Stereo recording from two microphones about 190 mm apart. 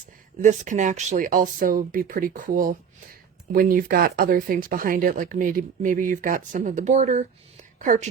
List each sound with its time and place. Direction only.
0.4 s speech: 40° right (ahead or behind)